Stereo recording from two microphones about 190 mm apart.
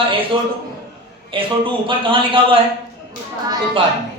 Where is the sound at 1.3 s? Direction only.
25° right (ahead or behind).